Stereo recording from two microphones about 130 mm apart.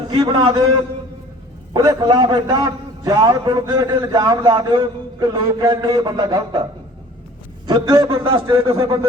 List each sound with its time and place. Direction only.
0.1 s a man's voice: 35° right (ahead or behind)
1.7 s a man's voice: 30° right (ahead or behind)
7.7 s a man's voice: 30° right (ahead or behind)
8.1 s a man's voice: 40° right (ahead or behind)